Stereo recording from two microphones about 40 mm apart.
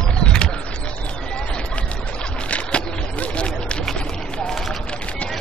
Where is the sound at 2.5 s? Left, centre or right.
Left.